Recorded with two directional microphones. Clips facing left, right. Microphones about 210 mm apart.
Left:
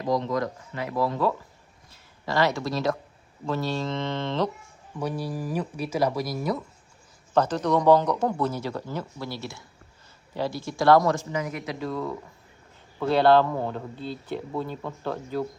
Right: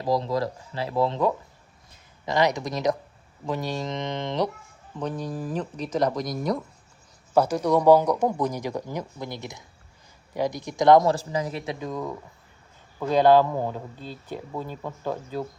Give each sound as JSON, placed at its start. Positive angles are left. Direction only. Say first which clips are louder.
{"t": 0.0, "sound": "speech", "louder": "right 1 dB", "side_deg": -30}
{"t": 4.9, "sound": "speech", "louder": "even", "side_deg": 10}
{"t": 7.3, "sound": "speech", "louder": "right 2 dB", "side_deg": -10}
{"t": 11.1, "sound": "speech", "louder": "right 1 dB", "side_deg": -35}